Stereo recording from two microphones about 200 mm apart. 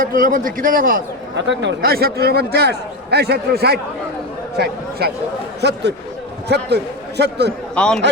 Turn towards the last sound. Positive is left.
turn(degrees=5)  # may be behind; listen again after turning